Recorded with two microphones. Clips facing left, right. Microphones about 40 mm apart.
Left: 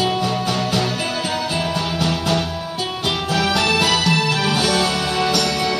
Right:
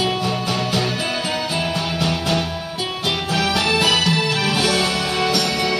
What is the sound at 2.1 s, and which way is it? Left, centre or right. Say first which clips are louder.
Music: even; centre.